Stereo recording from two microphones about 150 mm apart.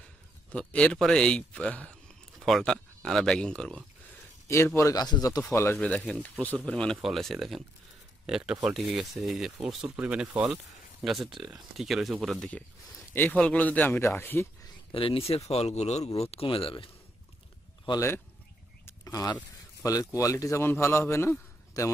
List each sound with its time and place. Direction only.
0.5 s speech: 10° left (ahead or behind)
4.5 s a man's voice: 20° left (ahead or behind)
5.4 s speech: 15° left (ahead or behind)
14.9 s speech: 40° left (ahead or behind)
17.8 s a man's voice: 20° left (ahead or behind)
18.9 s a sound: 25° left (ahead or behind)
19.8 s a man's voice: 20° left (ahead or behind)